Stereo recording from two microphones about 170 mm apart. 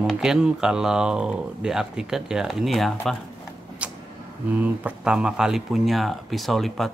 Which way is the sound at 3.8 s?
5° right (ahead or behind).